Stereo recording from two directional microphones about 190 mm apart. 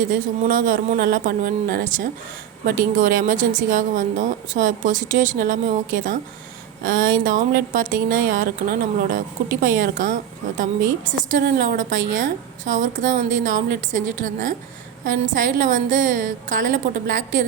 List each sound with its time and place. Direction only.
0.0 s a woman's voice: 45° right (ahead or behind)